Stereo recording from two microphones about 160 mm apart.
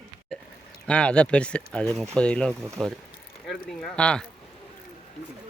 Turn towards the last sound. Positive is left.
turn(degrees=5)  # may be behind; listen again after turning